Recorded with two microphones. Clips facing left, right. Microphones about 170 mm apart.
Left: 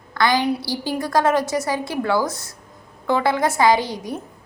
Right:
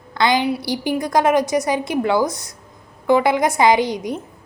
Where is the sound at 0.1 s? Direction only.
20° right (ahead or behind).